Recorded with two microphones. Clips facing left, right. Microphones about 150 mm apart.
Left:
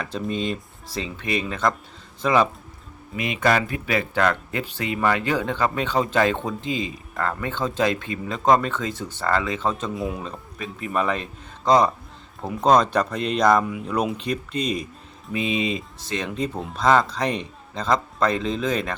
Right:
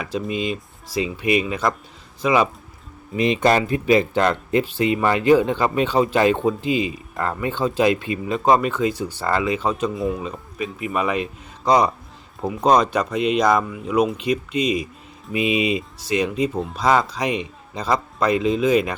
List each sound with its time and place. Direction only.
0.0 s a man's voice: 5° right (ahead or behind)
3.2 s a man's voice: 30° right (ahead or behind)
9.9 s a man's voice: centre (ahead or behind)
15.3 s a man's voice: 15° right (ahead or behind)